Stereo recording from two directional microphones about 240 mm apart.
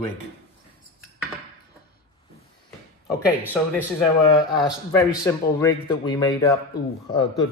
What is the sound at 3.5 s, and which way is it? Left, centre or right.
Speech, centre.